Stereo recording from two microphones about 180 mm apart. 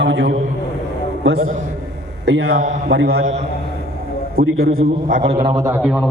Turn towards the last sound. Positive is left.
turn(degrees=0)  # may be behind; listen again after turning